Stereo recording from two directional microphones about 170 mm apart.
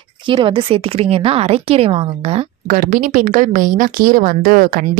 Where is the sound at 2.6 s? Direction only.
50° right (ahead or behind).